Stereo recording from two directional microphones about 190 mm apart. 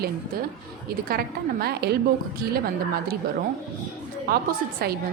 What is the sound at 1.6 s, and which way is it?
A woman's voice, 55° right (ahead or behind).